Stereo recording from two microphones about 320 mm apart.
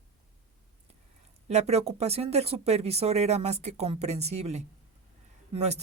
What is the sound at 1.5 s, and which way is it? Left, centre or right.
Speech, centre.